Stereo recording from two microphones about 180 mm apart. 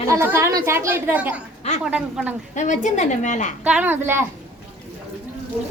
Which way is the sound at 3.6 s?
10° right (ahead or behind).